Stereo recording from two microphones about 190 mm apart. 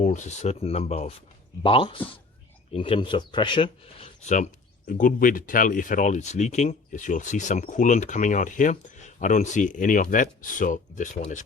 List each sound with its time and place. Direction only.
0.0 s speech: 40° left (ahead or behind)
4.9 s speech: 45° left (ahead or behind)